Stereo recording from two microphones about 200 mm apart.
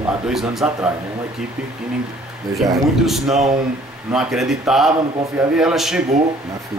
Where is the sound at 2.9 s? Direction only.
Centre (ahead or behind).